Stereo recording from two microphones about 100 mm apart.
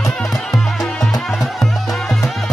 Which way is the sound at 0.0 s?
Centre (ahead or behind).